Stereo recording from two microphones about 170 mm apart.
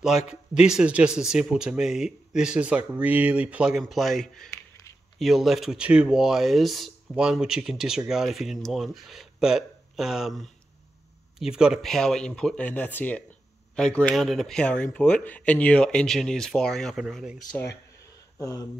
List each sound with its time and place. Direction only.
0.0 s a man's voice: 5° right (ahead or behind)
18.4 s speech: 20° left (ahead or behind)